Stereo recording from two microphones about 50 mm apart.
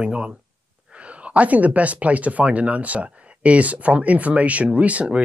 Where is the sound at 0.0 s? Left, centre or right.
Right.